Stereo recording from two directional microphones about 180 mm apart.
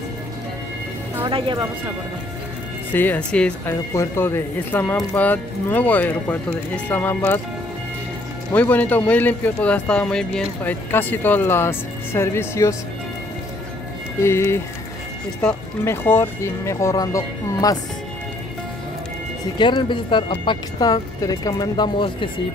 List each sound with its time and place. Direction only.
1.2 s speech: 30° right (ahead or behind)
2.9 s speech: 10° left (ahead or behind)
8.5 s speech: 10° left (ahead or behind)
14.2 s speech: 15° left (ahead or behind)
19.6 s speech: 25° left (ahead or behind)